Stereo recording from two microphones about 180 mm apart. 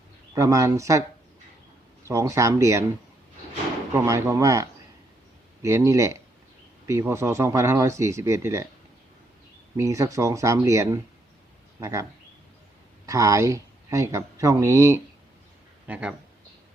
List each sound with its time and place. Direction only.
0.3 s speech: 15° right (ahead or behind)
2.0 s speech: 15° right (ahead or behind)
3.9 s speech: 15° right (ahead or behind)
9.7 s speech: 15° right (ahead or behind)
13.1 s speech: 20° right (ahead or behind)
15.9 s speech: 5° right (ahead or behind)